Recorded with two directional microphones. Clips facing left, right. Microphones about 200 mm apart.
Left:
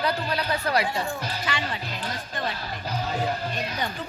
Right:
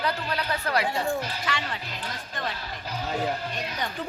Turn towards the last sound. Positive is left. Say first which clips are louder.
# left 1 dB
turn(degrees=40)  # may be behind; listen again after turning